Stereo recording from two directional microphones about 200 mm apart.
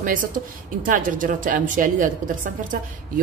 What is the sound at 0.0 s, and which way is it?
A woman's voice, 40° right (ahead or behind).